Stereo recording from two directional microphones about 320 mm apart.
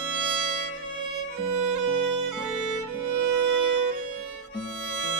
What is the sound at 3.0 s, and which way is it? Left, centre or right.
Music, right.